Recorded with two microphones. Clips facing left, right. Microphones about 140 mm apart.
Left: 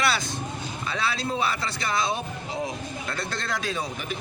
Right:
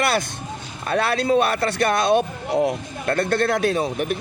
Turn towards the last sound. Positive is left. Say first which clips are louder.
# right 10 dB
turn(degrees=-60)  # may be behind; listen again after turning